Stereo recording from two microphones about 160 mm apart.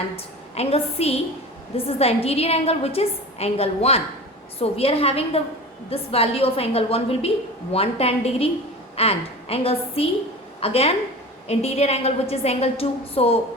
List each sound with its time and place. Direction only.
0.5 s a woman's voice: 40° left (ahead or behind)